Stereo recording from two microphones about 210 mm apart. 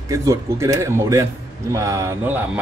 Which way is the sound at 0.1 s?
15° right (ahead or behind).